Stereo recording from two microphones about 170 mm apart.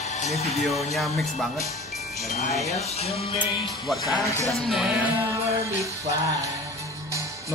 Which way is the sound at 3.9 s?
Centre (ahead or behind).